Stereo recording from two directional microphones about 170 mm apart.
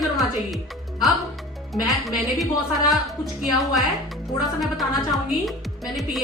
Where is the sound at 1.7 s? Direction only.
Centre (ahead or behind).